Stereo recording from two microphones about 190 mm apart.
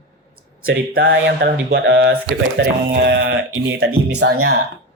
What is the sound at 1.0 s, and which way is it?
Speech, 60° right (ahead or behind).